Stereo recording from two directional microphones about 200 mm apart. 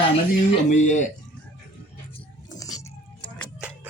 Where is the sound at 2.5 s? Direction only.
15° left (ahead or behind).